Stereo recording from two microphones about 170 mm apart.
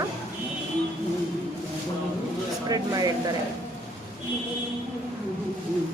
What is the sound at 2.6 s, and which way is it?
Speech, 20° right (ahead or behind).